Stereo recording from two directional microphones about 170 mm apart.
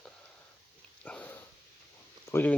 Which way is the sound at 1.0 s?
10° left (ahead or behind).